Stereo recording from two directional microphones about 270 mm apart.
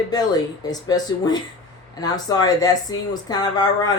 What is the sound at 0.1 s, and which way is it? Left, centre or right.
Speech, centre.